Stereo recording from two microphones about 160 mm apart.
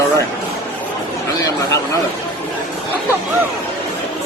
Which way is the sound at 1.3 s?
20° left (ahead or behind).